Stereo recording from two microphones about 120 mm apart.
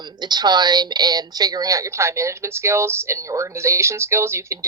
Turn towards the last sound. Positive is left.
turn(degrees=-25)  # may be behind; listen again after turning